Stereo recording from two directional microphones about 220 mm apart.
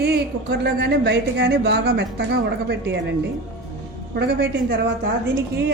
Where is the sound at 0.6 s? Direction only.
45° right (ahead or behind).